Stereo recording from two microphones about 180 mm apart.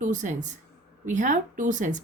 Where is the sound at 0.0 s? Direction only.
45° right (ahead or behind).